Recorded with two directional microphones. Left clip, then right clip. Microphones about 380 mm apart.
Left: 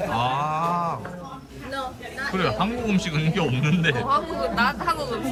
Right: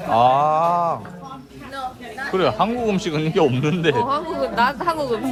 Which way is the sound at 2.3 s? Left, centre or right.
Centre.